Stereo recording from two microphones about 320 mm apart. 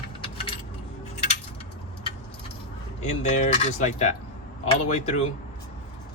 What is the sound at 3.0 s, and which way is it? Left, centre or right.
Speech, left.